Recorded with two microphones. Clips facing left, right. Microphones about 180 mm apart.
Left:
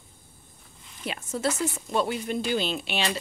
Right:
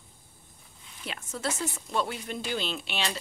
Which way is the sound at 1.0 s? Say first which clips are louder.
Left 5 dB; 15° left (ahead or behind).